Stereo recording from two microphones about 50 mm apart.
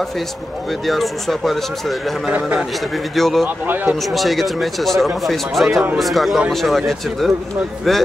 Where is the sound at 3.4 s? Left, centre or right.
Right.